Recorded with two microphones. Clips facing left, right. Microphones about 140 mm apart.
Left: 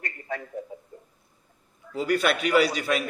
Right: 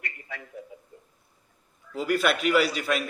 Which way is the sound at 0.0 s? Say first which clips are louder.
Left 6 dB; 40° left (ahead or behind).